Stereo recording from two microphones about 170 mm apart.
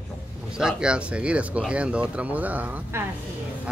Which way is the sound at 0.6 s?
5° right (ahead or behind).